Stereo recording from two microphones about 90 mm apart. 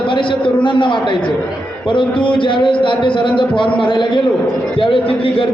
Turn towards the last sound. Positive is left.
turn(degrees=85)